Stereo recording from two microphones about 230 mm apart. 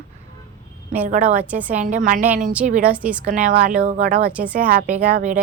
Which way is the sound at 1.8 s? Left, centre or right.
Right.